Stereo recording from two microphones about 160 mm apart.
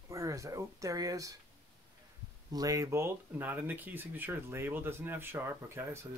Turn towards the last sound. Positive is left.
turn(degrees=-15)  # may be behind; listen again after turning